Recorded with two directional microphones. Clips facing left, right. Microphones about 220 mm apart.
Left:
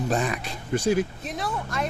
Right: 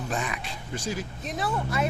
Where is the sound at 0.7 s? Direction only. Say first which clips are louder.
Left 10 dB; 60° left (ahead or behind).